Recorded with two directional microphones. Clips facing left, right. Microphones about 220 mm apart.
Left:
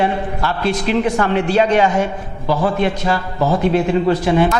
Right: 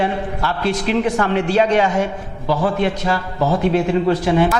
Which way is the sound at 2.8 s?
15° left (ahead or behind).